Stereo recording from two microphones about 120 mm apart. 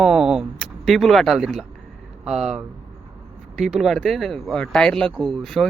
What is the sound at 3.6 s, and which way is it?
Speech, 5° right (ahead or behind).